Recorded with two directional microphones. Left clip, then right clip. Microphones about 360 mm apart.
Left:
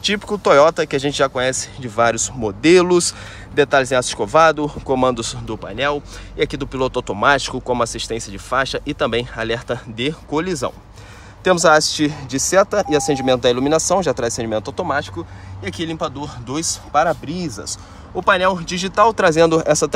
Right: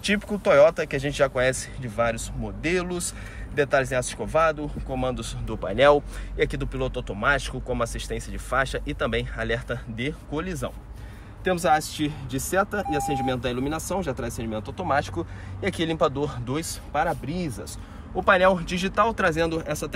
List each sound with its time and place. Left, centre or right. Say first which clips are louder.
0.0 s speech: left 6 dB; centre
15.6 s speech: even; centre
18.2 s speech: left 3 dB; centre